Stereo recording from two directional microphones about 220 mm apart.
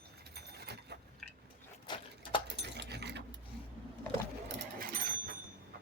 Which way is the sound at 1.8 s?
20° left (ahead or behind).